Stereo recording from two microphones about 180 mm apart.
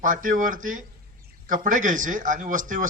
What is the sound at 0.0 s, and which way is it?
A man's voice, 45° right (ahead or behind).